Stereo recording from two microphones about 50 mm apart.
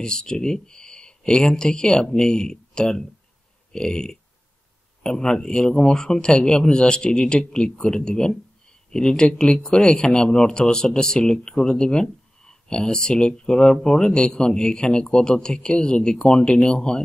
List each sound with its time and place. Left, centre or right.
0.0 s speech: centre